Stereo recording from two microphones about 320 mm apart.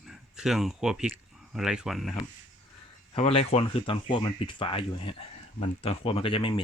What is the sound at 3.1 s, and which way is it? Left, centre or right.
Speech, centre.